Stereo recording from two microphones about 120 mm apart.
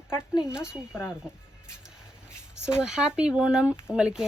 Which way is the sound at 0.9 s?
15° left (ahead or behind).